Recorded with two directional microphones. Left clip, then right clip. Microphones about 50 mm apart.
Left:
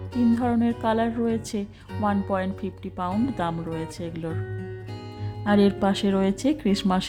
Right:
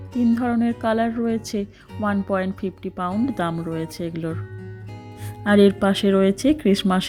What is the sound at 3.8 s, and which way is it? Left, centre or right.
Speech, right.